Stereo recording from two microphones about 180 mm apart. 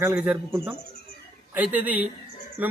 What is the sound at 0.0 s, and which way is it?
A man's voice, 10° right (ahead or behind).